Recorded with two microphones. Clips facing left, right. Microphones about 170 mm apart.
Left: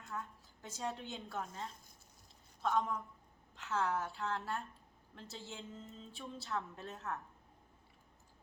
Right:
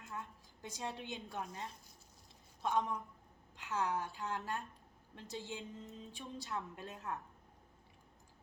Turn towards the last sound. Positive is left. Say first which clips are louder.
# even
turn(degrees=-15)  # may be behind; listen again after turning